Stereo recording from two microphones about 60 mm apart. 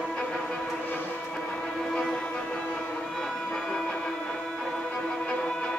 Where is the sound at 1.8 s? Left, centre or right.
Centre.